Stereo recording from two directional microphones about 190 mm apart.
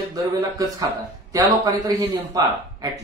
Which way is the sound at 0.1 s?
20° right (ahead or behind).